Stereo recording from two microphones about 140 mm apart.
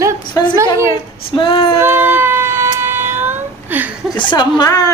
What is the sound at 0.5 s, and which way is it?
Speech, 20° right (ahead or behind).